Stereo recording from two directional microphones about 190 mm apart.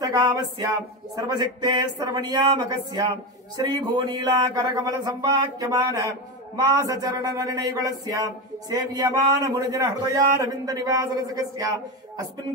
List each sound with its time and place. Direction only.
0.0 s speech: 20° right (ahead or behind)